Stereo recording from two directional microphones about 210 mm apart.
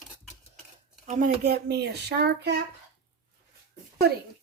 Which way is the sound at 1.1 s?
40° right (ahead or behind).